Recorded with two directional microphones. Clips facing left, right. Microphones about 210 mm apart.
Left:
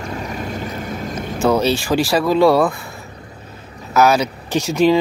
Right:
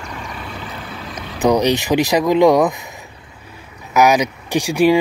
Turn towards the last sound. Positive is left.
turn(degrees=-10)  # may be behind; listen again after turning